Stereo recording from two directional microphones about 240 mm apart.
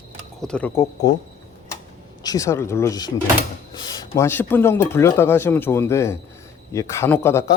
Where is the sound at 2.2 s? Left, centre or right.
Centre.